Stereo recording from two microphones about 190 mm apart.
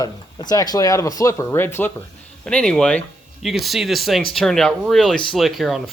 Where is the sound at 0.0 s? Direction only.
20° left (ahead or behind).